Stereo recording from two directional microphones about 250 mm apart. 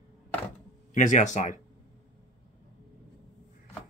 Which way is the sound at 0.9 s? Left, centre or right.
Left.